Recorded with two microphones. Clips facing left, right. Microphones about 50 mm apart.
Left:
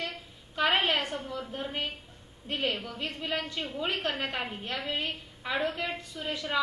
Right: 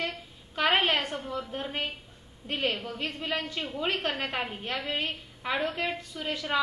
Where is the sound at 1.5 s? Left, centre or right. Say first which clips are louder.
Right 1 dB; right.